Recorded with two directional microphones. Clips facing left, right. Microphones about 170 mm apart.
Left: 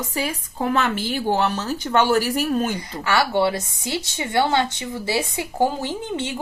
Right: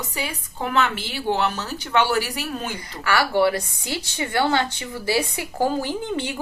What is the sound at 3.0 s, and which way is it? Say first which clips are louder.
A woman's voice: even; 25° left (ahead or behind).